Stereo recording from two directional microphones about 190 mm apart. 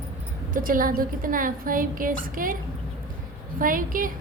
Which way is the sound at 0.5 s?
45° right (ahead or behind).